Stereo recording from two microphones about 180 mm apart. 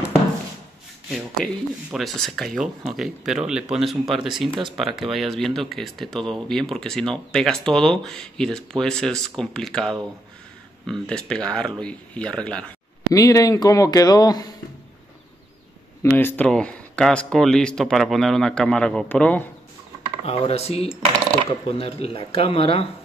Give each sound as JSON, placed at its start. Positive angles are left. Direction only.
{"t": 1.1, "sound": "speech", "side_deg": 0}
{"t": 13.1, "sound": "speech", "side_deg": 20}
{"t": 16.0, "sound": "speech", "side_deg": 10}
{"t": 20.2, "sound": "speech", "side_deg": 35}